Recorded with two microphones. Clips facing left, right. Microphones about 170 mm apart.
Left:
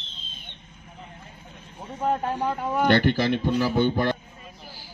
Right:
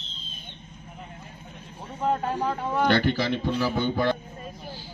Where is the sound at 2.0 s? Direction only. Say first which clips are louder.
Left 1 dB; centre (ahead or behind).